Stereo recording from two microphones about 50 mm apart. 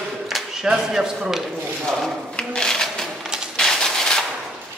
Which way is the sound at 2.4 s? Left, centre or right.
Centre.